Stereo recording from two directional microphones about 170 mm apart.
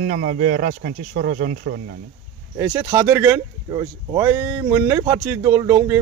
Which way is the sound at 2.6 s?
20° right (ahead or behind).